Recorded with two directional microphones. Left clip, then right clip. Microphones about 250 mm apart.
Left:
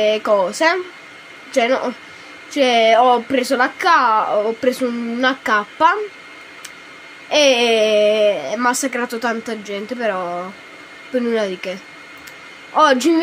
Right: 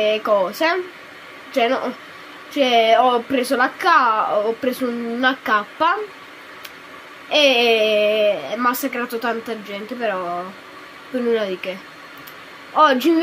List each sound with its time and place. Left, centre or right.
0.0 s a woman's voice: centre
7.2 s a woman's voice: centre
12.7 s a woman's voice: centre